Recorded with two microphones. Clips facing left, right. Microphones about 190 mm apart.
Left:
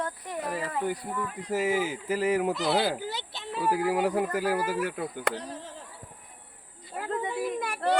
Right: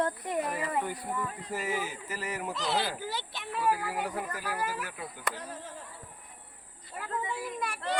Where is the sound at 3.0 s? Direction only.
20° left (ahead or behind).